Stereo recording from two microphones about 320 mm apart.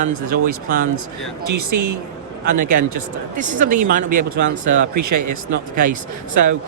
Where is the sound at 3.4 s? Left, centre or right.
Right.